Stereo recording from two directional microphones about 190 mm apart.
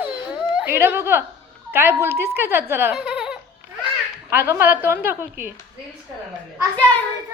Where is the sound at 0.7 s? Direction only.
10° right (ahead or behind).